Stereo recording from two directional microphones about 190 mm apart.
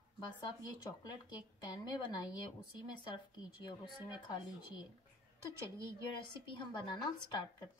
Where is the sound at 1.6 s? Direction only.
20° left (ahead or behind).